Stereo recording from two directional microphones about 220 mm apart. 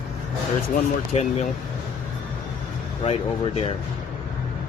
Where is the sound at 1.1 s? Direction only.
30° left (ahead or behind).